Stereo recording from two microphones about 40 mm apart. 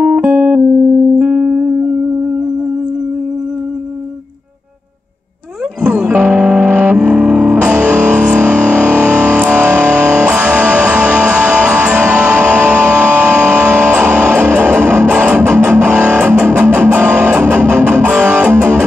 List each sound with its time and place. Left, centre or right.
0.3 s music: right
0.6 s music: right
5.9 s music: right
6.6 s music: right
7.0 s music: right
7.5 s music: right